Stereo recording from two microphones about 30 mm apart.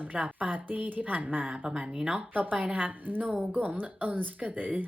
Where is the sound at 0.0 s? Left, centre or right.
Right.